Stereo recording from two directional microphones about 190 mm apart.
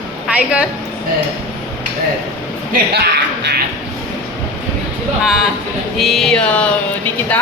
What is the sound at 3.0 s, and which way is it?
Music, 60° right (ahead or behind).